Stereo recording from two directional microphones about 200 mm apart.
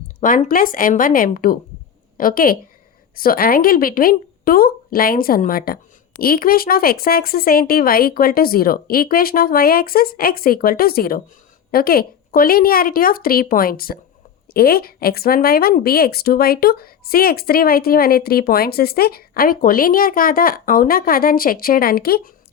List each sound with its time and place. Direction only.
0.2 s a woman's voice: 40° left (ahead or behind)